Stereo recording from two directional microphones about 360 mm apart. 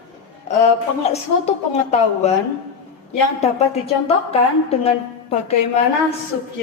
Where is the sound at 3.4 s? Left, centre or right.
Centre.